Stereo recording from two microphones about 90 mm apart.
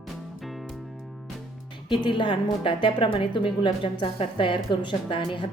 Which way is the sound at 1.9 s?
65° left (ahead or behind).